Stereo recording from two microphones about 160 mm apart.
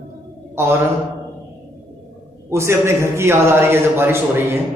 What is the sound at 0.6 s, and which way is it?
Speech, 15° right (ahead or behind).